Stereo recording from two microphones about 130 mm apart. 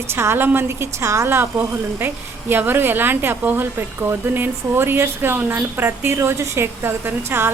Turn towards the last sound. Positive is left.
turn(degrees=-15)  # may be behind; listen again after turning